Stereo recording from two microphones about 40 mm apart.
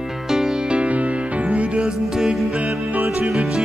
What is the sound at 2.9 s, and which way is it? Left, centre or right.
Music, right.